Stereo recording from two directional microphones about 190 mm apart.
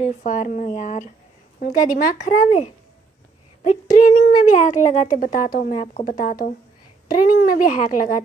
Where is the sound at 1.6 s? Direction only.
55° left (ahead or behind).